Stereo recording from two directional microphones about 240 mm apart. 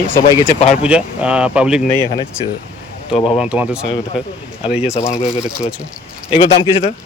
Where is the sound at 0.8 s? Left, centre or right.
Centre.